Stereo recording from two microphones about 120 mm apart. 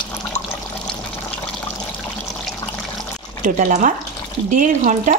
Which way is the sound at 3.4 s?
90° right.